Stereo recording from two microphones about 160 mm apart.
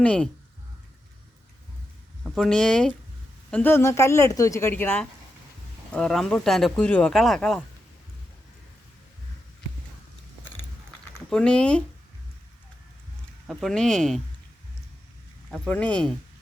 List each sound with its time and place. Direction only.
0.0 s a woman's voice: 10° left (ahead or behind)
2.2 s a woman's voice: centre (ahead or behind)
11.3 s speech: 5° left (ahead or behind)
13.5 s speech: centre (ahead or behind)
15.4 s speech: centre (ahead or behind)